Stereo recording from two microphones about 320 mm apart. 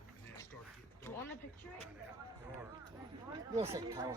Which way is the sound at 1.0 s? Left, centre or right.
Centre.